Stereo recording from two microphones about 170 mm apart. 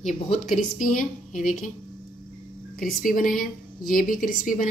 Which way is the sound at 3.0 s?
55° left (ahead or behind).